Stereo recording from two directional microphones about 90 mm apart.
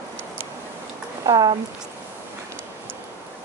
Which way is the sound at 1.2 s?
50° right (ahead or behind).